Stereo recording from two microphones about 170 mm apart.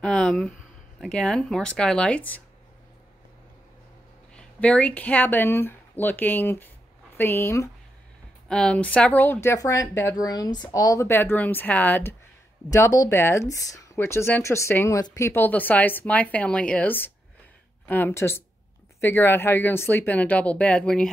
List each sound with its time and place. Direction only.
0.0 s speech: 5° left (ahead or behind)
4.3 s speech: 5° left (ahead or behind)